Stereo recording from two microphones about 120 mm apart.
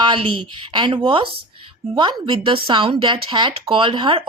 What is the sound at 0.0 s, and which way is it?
Speech, 45° right (ahead or behind).